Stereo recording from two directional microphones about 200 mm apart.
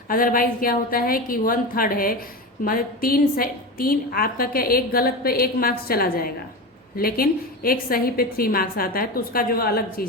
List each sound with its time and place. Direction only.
0.1 s a woman's voice: 45° left (ahead or behind)